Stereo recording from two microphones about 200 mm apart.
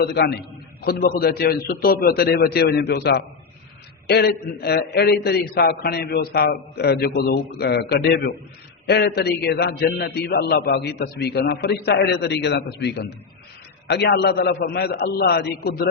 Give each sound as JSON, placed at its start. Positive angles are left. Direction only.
{"t": 0.0, "sound": "a man's voice", "side_deg": 55}